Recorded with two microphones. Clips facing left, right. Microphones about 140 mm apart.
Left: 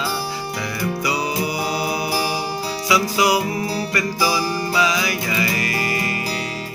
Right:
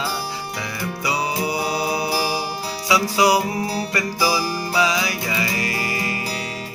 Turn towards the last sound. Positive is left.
turn(degrees=-25)  # may be behind; listen again after turning